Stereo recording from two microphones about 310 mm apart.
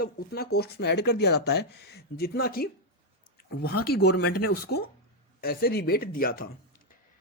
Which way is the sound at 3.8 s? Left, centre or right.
Left.